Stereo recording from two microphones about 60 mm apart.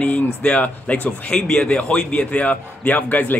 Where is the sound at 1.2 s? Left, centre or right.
Centre.